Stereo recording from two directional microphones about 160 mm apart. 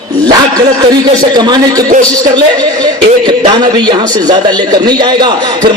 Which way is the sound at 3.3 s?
30° right (ahead or behind).